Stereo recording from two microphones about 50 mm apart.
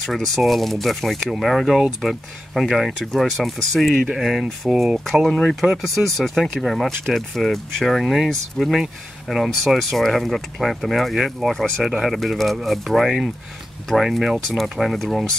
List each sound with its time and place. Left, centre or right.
0.0 s speech: centre
5.3 s speech: centre
5.6 s speech: centre